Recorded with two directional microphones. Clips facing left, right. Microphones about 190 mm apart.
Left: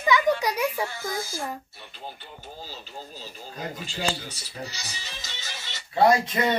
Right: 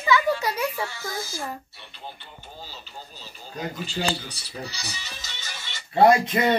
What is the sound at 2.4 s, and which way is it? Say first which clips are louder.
Speech: left 2 dB; 45° left (ahead or behind).